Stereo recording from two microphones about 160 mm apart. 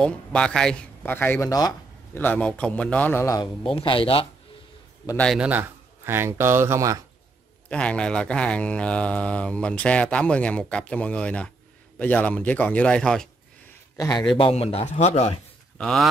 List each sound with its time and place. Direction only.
0.0 s speech: 5° left (ahead or behind)
3.6 s a man's voice: 35° left (ahead or behind)
5.1 s a man's voice: 5° left (ahead or behind)
5.4 s speech: 10° right (ahead or behind)
7.7 s speech: 5° left (ahead or behind)
13.9 s a man's voice: 25° left (ahead or behind)
14.3 s a man's voice: 35° left (ahead or behind)
15.8 s a man's voice: centre (ahead or behind)